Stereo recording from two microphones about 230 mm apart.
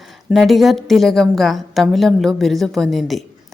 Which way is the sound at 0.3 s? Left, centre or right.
Centre.